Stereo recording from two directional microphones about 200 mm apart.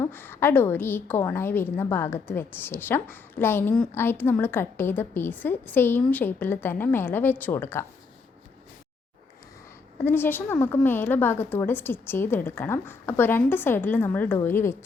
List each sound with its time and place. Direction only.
0.0 s a woman's voice: 10° left (ahead or behind)
10.0 s a woman's voice: 10° left (ahead or behind)